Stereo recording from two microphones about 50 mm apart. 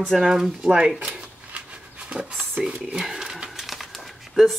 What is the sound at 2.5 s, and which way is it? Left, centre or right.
Speech, right.